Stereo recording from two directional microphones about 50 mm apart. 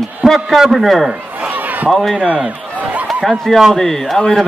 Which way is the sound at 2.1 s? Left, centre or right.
Right.